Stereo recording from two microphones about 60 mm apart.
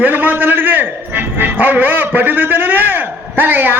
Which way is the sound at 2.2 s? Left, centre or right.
Right.